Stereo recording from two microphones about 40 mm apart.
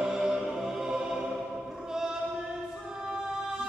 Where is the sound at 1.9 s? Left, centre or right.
Centre.